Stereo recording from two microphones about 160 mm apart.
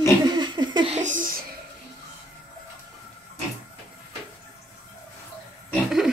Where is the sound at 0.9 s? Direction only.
50° right (ahead or behind).